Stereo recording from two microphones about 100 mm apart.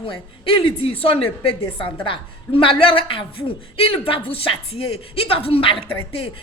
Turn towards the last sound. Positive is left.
turn(degrees=65)  # may be behind; listen again after turning